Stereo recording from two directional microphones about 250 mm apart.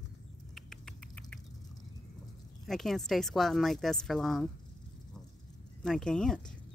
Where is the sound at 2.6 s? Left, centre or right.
Centre.